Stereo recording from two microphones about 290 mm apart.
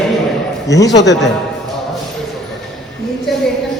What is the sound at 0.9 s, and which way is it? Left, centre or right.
Speech, left.